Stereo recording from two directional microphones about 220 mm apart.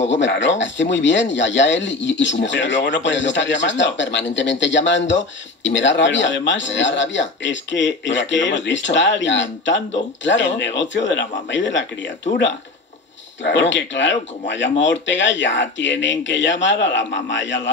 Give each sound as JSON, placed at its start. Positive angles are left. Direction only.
{"t": 0.1, "sound": "speech", "side_deg": 55}
{"t": 13.4, "sound": "speech", "side_deg": 55}